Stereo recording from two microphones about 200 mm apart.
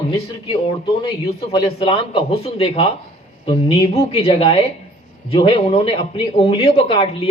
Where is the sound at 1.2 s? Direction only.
30° left (ahead or behind).